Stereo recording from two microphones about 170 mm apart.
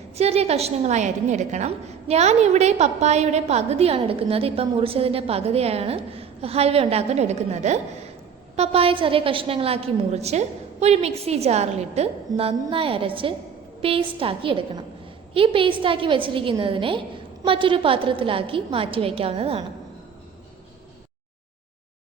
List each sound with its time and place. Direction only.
0.2 s a woman's voice: 35° right (ahead or behind)